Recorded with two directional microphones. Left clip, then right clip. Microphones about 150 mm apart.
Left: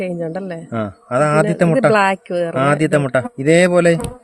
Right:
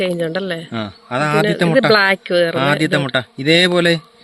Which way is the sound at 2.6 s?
55° left (ahead or behind).